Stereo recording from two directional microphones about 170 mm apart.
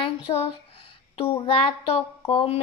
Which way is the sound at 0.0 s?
30° left (ahead or behind).